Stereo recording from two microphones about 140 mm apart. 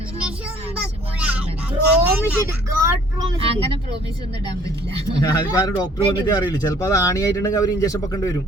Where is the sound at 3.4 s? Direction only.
40° right (ahead or behind).